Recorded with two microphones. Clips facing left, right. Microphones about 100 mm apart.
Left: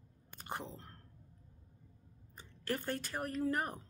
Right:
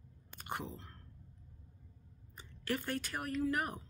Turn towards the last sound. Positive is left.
turn(degrees=35)  # may be behind; listen again after turning